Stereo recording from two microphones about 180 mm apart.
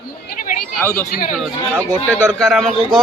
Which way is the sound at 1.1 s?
50° left (ahead or behind).